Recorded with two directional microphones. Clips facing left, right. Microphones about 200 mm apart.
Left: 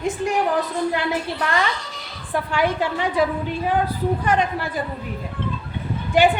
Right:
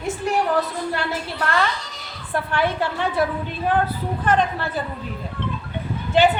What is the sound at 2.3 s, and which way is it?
Speech, 15° left (ahead or behind).